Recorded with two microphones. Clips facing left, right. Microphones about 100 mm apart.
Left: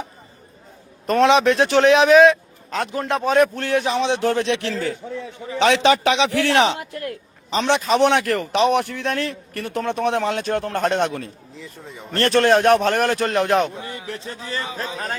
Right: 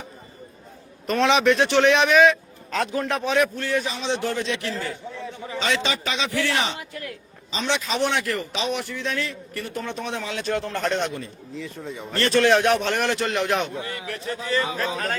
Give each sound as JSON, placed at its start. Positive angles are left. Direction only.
{"t": 1.0, "sound": "a man's voice", "side_deg": 35}
{"t": 2.6, "sound": "a man's voice", "side_deg": 25}
{"t": 3.5, "sound": "a man's voice", "side_deg": 60}
{"t": 5.5, "sound": "a man's voice", "side_deg": 70}
{"t": 11.5, "sound": "speech", "side_deg": 0}
{"t": 12.1, "sound": "a man's voice", "side_deg": 55}
{"t": 13.8, "sound": "a man's voice", "side_deg": 20}
{"t": 14.4, "sound": "a man's voice", "side_deg": 35}